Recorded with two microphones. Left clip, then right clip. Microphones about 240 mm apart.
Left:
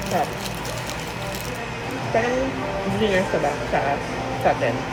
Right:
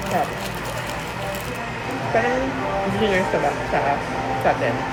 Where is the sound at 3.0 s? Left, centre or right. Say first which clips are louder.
Even; centre.